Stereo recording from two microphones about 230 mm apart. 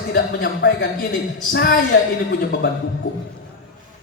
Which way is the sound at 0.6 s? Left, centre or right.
Left.